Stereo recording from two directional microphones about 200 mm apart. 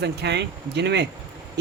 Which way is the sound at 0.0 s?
60° right (ahead or behind).